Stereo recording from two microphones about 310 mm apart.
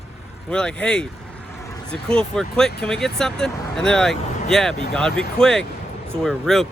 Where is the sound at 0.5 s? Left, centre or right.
Centre.